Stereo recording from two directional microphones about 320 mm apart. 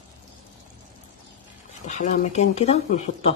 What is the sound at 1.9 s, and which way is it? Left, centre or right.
Speech, left.